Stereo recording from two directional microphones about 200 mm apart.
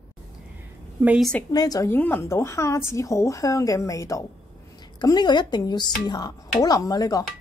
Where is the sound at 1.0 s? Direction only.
5° right (ahead or behind).